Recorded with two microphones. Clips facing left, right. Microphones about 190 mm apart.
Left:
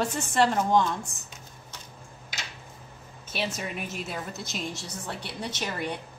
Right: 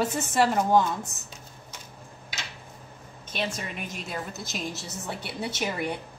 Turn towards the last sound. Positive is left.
turn(degrees=-10)  # may be behind; listen again after turning